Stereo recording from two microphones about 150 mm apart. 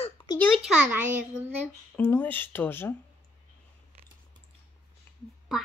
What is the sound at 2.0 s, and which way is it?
Speech, 15° left (ahead or behind).